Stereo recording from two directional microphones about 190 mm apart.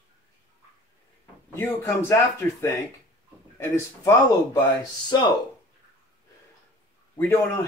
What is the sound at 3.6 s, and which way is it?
Speech, 15° left (ahead or behind).